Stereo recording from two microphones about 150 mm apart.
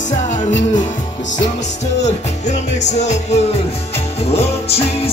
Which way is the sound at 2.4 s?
50° left (ahead or behind).